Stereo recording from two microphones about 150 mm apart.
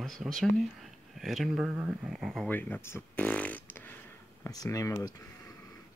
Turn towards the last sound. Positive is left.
turn(degrees=25)  # may be behind; listen again after turning